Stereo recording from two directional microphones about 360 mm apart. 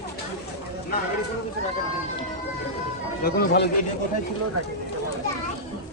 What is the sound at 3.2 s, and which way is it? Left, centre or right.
Speech, left.